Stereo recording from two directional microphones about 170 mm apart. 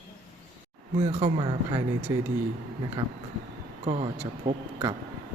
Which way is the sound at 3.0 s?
35° right (ahead or behind).